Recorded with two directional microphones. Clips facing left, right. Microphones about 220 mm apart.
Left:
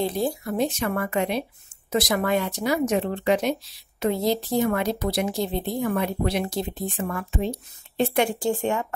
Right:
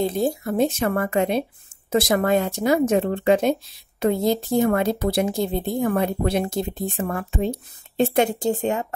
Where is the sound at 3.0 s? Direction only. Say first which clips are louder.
Right 4 dB; 55° right (ahead or behind).